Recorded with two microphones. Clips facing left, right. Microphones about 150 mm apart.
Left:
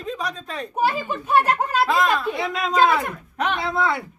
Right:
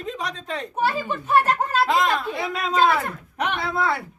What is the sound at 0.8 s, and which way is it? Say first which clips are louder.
Speech: left 2 dB; 10° left (ahead or behind).